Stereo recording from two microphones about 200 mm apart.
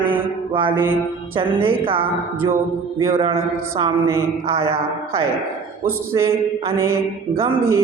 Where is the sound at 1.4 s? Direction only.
25° right (ahead or behind).